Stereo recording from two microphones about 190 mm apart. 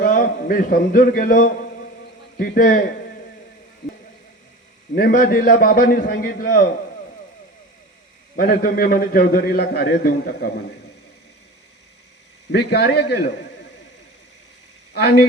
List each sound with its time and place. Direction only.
0.0 s a man's voice: 50° left (ahead or behind)
4.9 s a man's voice: 50° left (ahead or behind)
8.4 s a man's voice: 50° left (ahead or behind)
12.5 s a man's voice: 60° left (ahead or behind)